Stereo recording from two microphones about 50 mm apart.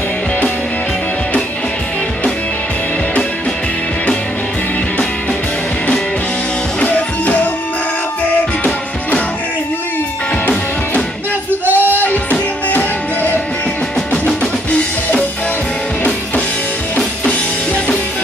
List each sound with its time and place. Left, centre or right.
6.8 s music: left
11.6 s music: right
12.0 s music: left
14.1 s music: left